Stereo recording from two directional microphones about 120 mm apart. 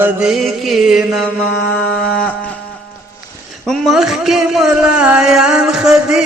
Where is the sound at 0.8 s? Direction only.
5° right (ahead or behind).